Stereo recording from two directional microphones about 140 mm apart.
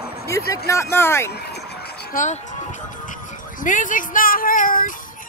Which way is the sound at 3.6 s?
70° left (ahead or behind).